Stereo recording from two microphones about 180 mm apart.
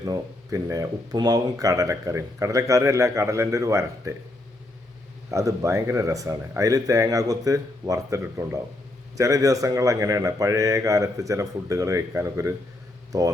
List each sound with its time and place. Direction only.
0.0 s speech: 20° right (ahead or behind)
5.3 s speech: 15° right (ahead or behind)